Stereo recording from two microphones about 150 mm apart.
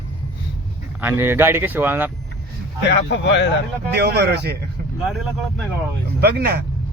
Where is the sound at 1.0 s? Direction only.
15° right (ahead or behind).